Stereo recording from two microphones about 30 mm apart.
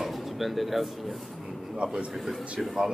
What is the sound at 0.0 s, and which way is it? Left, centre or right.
Speech, centre.